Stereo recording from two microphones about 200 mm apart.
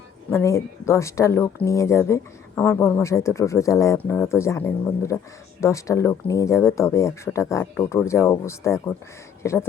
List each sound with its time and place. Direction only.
0.3 s speech: 15° left (ahead or behind)